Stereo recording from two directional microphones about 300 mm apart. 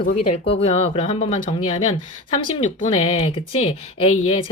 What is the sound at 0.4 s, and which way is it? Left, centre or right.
Speech, centre.